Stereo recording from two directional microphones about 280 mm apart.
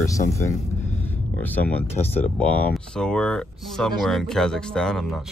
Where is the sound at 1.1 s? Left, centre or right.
Centre.